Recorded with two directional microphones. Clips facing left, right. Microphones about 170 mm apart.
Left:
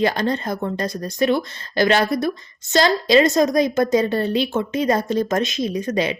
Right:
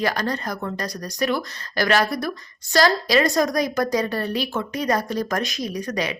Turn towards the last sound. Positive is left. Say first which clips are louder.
# left 5 dB
turn(degrees=25)  # may be behind; listen again after turning